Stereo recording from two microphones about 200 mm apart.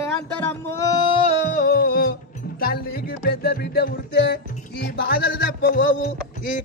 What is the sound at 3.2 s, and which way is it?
Music, 55° left (ahead or behind).